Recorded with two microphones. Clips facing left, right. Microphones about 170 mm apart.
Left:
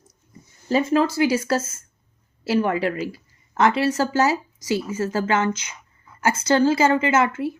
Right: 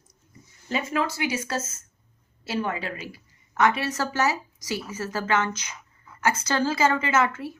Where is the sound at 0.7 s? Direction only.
35° left (ahead or behind).